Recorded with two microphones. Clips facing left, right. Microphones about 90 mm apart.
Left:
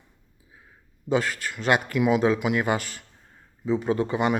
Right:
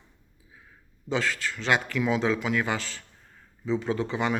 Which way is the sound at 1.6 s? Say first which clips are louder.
Left 3 dB; 50° left (ahead or behind).